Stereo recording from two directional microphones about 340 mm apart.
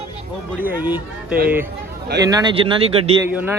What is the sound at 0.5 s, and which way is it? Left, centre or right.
Speech, centre.